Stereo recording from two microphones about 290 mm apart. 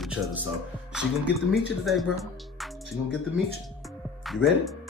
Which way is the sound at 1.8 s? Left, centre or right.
Centre.